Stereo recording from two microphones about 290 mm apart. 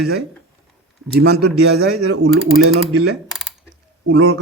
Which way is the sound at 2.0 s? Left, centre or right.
Right.